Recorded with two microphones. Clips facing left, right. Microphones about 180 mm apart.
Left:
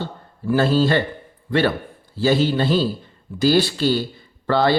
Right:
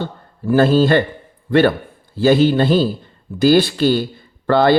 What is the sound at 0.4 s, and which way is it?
A man's voice, 50° right (ahead or behind).